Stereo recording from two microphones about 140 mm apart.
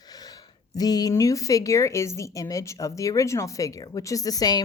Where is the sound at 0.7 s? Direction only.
30° left (ahead or behind).